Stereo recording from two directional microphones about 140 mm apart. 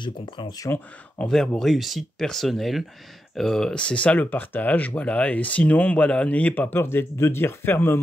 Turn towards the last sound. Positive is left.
turn(degrees=15)  # may be behind; listen again after turning